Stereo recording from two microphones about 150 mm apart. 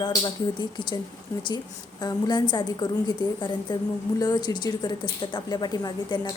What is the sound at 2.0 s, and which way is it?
A woman's voice, 30° left (ahead or behind).